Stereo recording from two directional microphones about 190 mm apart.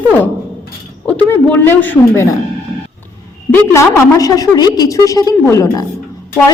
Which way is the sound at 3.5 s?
15° left (ahead or behind).